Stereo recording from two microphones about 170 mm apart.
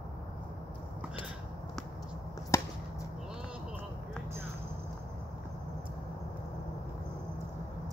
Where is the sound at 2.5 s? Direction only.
15° left (ahead or behind).